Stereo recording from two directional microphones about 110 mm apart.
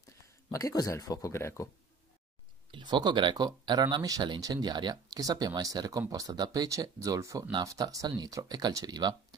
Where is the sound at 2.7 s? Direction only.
45° right (ahead or behind).